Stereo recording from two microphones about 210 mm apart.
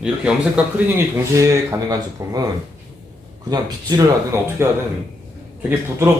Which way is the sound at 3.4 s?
15° right (ahead or behind).